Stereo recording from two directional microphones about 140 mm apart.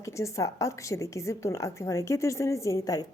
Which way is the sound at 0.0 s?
20° left (ahead or behind).